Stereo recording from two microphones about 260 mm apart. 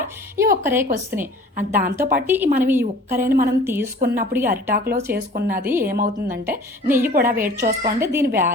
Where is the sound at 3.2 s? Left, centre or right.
Right.